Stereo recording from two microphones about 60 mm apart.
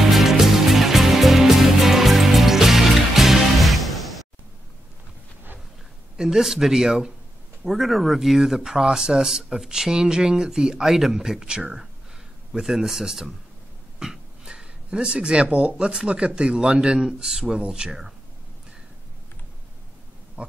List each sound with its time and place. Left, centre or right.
0.0 s music: centre
6.1 s speech: centre
13.9 s a sound: centre
15.4 s speech: centre
20.4 s pig: right